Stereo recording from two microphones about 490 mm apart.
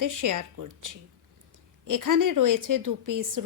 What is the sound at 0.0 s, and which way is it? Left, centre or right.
A woman's voice, right.